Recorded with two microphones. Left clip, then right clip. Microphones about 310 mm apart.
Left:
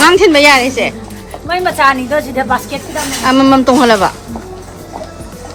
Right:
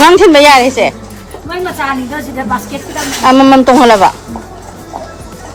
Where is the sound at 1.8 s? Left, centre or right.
Centre.